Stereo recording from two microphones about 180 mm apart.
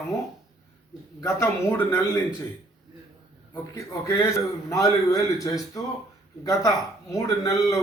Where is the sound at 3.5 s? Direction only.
15° left (ahead or behind).